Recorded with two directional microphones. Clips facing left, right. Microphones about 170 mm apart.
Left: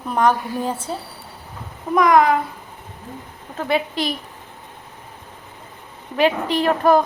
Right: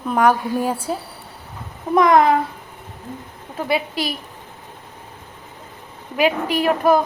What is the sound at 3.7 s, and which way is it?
Speech, 5° right (ahead or behind).